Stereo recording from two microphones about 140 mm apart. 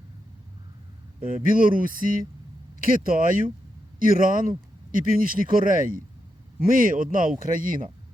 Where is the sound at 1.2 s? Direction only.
80° right.